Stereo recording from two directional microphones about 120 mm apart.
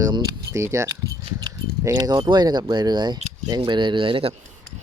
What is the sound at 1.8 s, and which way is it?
Speech, 30° right (ahead or behind).